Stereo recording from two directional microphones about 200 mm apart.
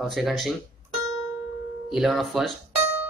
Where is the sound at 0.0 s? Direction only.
Centre (ahead or behind).